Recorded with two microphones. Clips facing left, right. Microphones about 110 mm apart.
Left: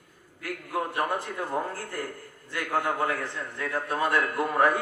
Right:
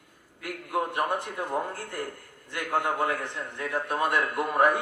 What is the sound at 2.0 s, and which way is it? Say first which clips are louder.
A man's voice: even; 20° right (ahead or behind).